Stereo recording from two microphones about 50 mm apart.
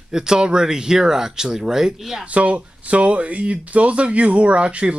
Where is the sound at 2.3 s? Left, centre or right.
Right.